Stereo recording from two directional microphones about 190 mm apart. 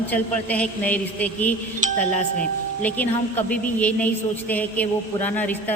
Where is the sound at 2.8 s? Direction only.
10° left (ahead or behind).